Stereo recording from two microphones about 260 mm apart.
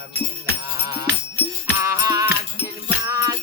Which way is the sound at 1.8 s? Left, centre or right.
Centre.